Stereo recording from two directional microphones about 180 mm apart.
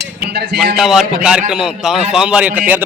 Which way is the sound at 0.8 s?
Centre (ahead or behind).